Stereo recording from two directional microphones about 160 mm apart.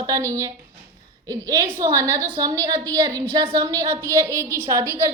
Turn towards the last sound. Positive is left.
turn(degrees=-15)  # may be behind; listen again after turning